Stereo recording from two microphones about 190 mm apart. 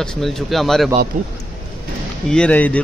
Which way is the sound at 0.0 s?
Centre (ahead or behind).